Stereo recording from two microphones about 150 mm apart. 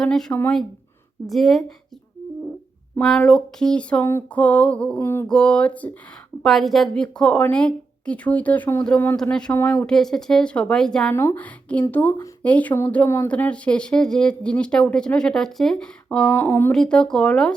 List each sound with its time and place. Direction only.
0.0 s a woman's voice: 5° left (ahead or behind)
3.0 s a woman's voice: 5° left (ahead or behind)
11.1 s speech: 15° left (ahead or behind)
16.3 s speech: 15° left (ahead or behind)
16.7 s a woman's voice: 5° left (ahead or behind)